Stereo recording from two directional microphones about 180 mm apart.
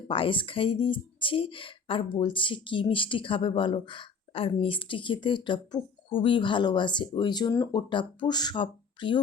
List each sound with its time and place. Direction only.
0.1 s speech: 30° left (ahead or behind)